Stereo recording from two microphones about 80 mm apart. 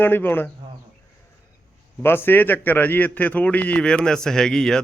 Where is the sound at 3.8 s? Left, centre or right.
Centre.